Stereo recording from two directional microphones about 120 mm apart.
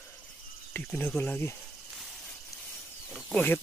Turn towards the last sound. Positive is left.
turn(degrees=15)  # may be behind; listen again after turning